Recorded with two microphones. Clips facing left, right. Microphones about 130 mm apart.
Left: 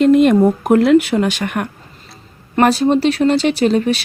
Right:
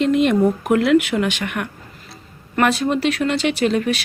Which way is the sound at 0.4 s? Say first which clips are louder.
Left 4 dB; 35° left (ahead or behind).